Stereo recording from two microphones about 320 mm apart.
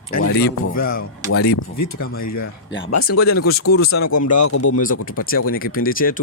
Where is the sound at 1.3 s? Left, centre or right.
Left.